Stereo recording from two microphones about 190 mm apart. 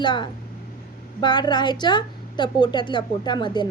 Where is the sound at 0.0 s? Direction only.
25° left (ahead or behind).